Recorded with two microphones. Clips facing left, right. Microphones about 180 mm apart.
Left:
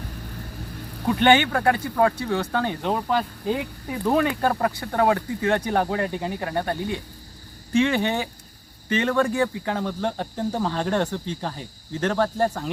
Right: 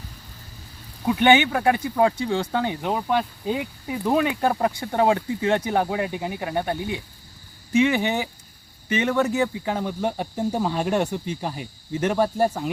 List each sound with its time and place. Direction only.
0.2 s vehicle: 60° left (ahead or behind)
1.0 s speech: 15° right (ahead or behind)